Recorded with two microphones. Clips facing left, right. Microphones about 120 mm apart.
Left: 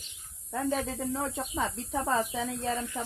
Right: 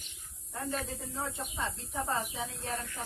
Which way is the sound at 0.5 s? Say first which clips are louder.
Left 7 dB; 90° left.